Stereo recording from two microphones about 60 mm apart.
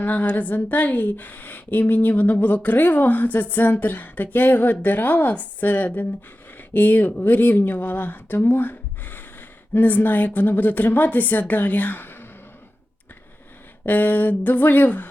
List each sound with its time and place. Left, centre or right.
0.0 s a woman's voice: left
13.8 s speech: left